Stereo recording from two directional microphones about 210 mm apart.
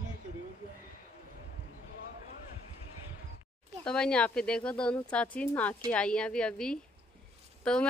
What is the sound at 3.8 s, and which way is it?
Speech, 5° left (ahead or behind).